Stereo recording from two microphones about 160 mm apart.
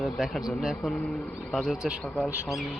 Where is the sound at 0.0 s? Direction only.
Centre (ahead or behind).